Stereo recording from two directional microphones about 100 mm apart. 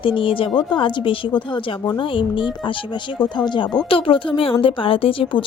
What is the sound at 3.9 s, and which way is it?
A woman's voice, 65° left (ahead or behind).